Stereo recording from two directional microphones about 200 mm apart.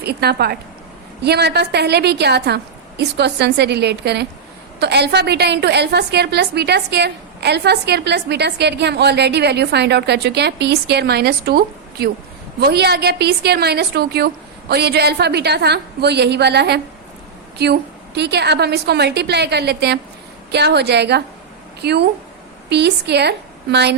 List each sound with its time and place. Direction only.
0.0 s a woman's voice: 55° right (ahead or behind)